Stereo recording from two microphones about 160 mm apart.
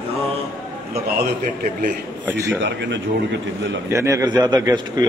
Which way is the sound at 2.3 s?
20° right (ahead or behind).